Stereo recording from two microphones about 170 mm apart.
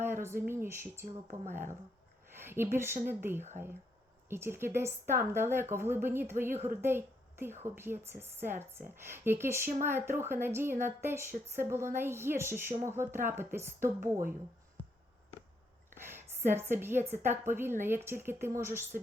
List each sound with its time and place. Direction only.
0.0 s speech: 15° right (ahead or behind)
1.0 s speech: 50° right (ahead or behind)
2.3 s a woman's voice: 15° right (ahead or behind)
16.0 s a woman's voice: 15° right (ahead or behind)